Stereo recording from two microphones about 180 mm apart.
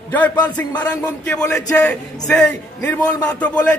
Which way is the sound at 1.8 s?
5° left (ahead or behind).